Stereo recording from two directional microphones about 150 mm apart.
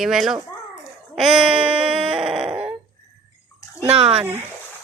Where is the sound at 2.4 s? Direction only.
10° right (ahead or behind).